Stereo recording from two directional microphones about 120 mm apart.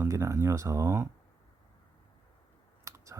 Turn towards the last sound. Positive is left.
turn(degrees=-25)  # may be behind; listen again after turning